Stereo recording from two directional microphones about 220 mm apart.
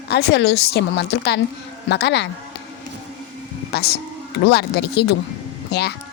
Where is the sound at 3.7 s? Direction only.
45° left (ahead or behind).